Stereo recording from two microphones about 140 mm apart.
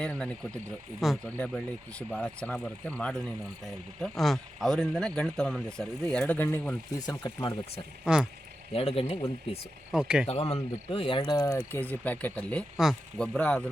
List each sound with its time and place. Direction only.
0.0 s speech: 5° left (ahead or behind)
7.0 s speech: 30° left (ahead or behind)
8.0 s speech: 5° right (ahead or behind)
8.7 s speech: 45° left (ahead or behind)
9.9 s speech: 5° right (ahead or behind)
10.5 s speech: 40° left (ahead or behind); by 12.6 s 10° left (ahead or behind)
12.7 s speech: 5° right (ahead or behind)